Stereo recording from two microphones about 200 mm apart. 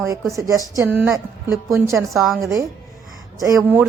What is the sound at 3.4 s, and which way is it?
Speech, 15° right (ahead or behind).